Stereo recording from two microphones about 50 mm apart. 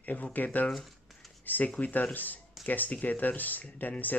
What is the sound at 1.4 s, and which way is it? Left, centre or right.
Speech, left.